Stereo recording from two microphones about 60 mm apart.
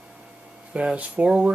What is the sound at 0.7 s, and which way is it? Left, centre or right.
Speech, right.